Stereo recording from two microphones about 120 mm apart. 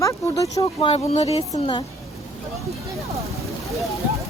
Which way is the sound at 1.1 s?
60° left (ahead or behind).